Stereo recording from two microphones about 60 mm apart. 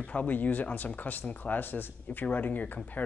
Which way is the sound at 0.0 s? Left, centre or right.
Left.